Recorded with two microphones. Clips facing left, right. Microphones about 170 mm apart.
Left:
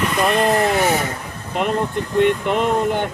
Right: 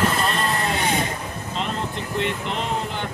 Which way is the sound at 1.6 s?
60° left (ahead or behind).